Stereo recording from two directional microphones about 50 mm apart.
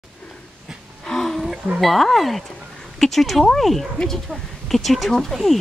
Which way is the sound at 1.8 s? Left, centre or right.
Centre.